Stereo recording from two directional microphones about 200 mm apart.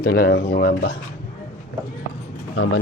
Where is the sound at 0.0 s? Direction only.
50° left (ahead or behind).